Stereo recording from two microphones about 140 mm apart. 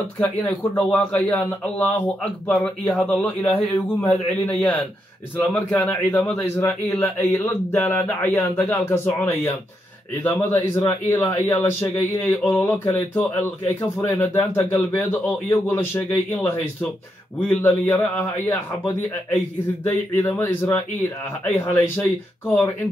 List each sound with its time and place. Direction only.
0.2 s speech: 10° left (ahead or behind)
17.5 s speech: 15° left (ahead or behind)